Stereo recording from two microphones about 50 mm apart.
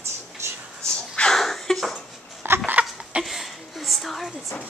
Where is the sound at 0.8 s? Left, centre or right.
Centre.